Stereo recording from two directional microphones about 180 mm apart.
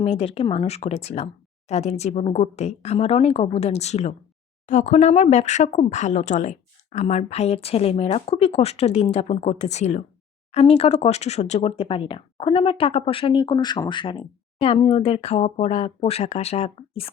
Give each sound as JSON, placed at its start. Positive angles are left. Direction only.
{"t": 0.0, "sound": "speech", "side_deg": 35}